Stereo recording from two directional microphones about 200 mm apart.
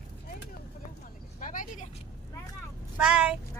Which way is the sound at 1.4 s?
40° left (ahead or behind).